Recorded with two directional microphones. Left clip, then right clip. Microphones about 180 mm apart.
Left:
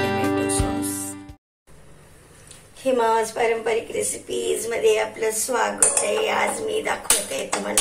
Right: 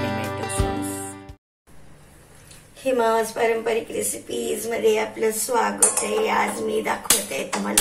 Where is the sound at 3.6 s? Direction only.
20° left (ahead or behind).